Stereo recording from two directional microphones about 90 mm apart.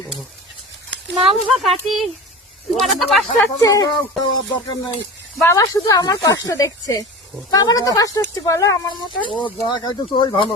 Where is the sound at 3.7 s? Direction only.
45° left (ahead or behind).